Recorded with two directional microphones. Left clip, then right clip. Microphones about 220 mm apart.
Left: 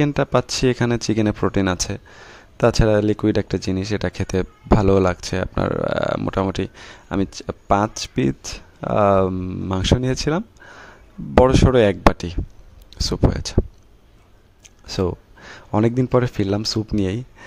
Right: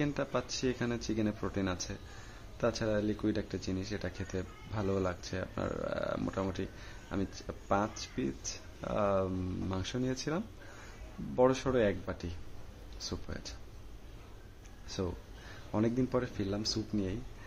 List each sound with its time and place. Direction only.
0.0 s speech: 50° left (ahead or behind)
11.4 s speech: 45° left (ahead or behind)
15.7 s speech: 50° left (ahead or behind)